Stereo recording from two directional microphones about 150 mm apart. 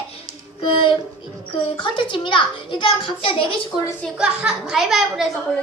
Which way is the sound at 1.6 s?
35° left (ahead or behind).